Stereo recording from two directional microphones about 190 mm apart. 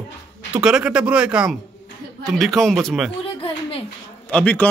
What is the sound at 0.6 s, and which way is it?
Speech, 5° right (ahead or behind).